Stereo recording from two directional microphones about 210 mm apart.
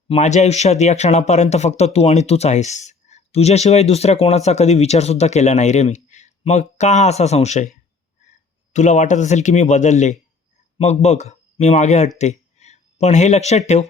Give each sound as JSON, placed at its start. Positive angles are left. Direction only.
{"t": 0.1, "sound": "speech", "side_deg": 35}
{"t": 8.7, "sound": "speech", "side_deg": 35}